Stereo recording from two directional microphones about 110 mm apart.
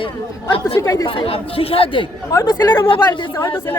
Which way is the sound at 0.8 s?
25° left (ahead or behind).